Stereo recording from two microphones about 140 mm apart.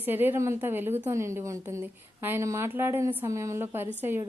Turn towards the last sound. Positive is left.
turn(degrees=-15)  # may be behind; listen again after turning